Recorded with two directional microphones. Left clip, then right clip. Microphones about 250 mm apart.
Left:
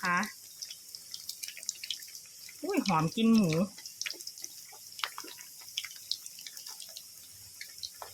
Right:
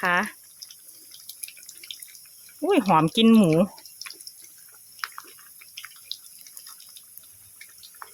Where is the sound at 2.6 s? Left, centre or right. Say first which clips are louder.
Right 11 dB; right.